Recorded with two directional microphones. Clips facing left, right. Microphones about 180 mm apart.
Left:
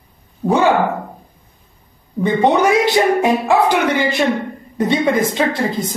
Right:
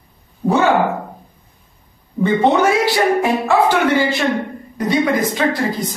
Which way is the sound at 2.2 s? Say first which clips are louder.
Even; 20° left (ahead or behind).